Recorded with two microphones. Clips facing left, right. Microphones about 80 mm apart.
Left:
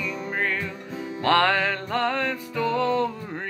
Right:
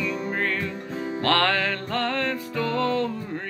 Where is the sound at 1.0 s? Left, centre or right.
Right.